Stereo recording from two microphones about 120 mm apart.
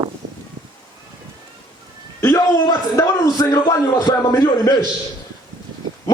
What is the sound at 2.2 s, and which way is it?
A man's voice, 30° left (ahead or behind).